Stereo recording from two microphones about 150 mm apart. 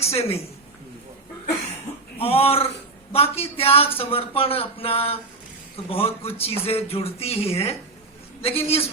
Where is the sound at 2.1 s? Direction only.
40° left (ahead or behind).